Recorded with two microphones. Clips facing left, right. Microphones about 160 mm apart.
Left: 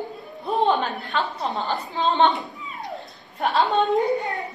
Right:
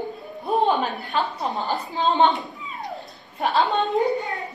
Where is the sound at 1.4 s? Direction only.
Centre (ahead or behind).